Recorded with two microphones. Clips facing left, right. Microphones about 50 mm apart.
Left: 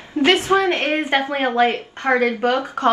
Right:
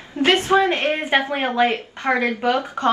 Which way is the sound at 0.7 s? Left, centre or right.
Left.